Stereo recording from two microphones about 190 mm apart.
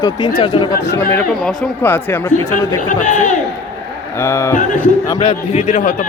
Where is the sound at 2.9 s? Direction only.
40° left (ahead or behind).